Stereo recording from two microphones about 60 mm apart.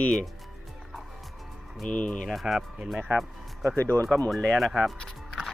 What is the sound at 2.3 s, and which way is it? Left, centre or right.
Speech, centre.